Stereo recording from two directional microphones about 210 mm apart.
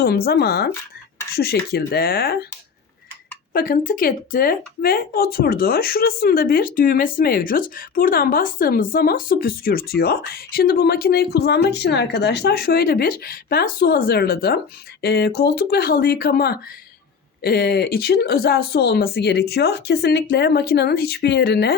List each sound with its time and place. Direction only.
0.0 s speech: 50° left (ahead or behind)
3.5 s speech: 45° left (ahead or behind)